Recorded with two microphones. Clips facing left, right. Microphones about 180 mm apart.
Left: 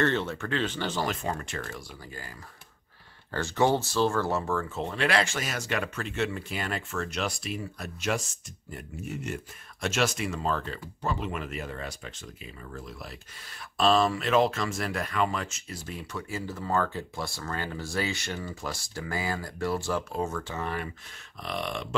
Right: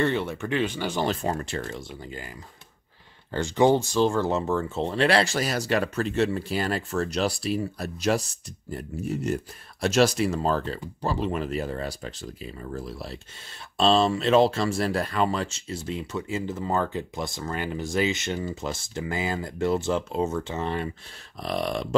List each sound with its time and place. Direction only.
0.0 s speech: 10° right (ahead or behind)
1.0 s speech: 35° right (ahead or behind)
3.3 s speech: 15° right (ahead or behind)
21.4 s speech: 35° right (ahead or behind)